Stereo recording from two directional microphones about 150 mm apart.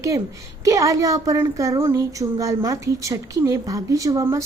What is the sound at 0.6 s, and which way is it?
Speech, 20° right (ahead or behind).